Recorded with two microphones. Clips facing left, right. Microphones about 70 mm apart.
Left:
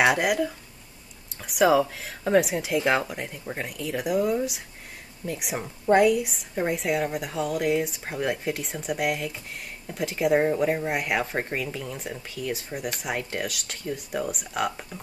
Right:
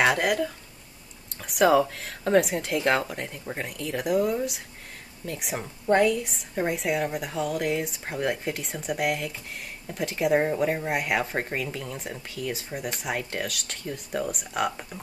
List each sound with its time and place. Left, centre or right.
0.0 s speech: centre